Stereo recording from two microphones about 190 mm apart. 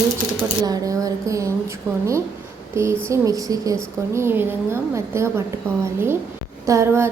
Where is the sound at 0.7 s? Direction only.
20° right (ahead or behind).